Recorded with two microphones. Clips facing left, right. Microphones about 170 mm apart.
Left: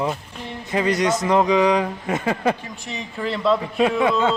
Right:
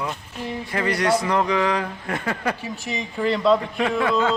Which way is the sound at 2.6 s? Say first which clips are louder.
Right 3 dB; 5° right (ahead or behind).